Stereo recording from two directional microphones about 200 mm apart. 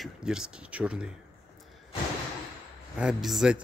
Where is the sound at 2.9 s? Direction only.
5° right (ahead or behind).